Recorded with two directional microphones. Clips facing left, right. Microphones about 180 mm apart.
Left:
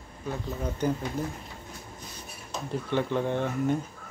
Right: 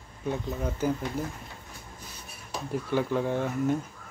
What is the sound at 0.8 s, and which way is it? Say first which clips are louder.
Speech: even; 5° right (ahead or behind).